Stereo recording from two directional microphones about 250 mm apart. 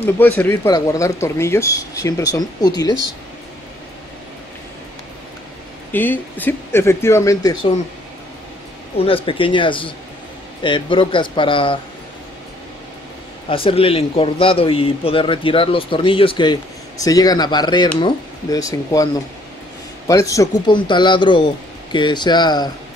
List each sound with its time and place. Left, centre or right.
0.0 s speech: centre
5.9 s speech: centre
8.9 s a man's voice: left
13.5 s a man's voice: left
20.1 s speech: centre